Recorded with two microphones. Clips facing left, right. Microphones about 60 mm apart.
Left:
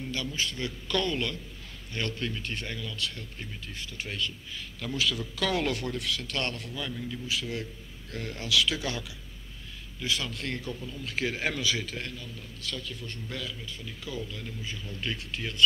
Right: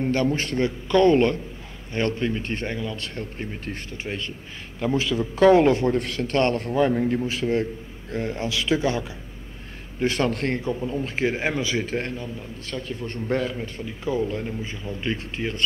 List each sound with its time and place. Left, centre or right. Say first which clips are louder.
0.0 s a man's voice: right 11 dB; right
0.7 s a man's voice: right 14 dB; right
8.1 s speech: right 5 dB; right
9.9 s a man's voice: right 10 dB; right
10.9 s a man's voice: right 6 dB; right